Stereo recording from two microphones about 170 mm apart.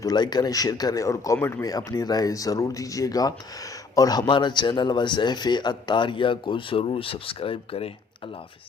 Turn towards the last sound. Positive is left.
turn(degrees=35)  # may be behind; listen again after turning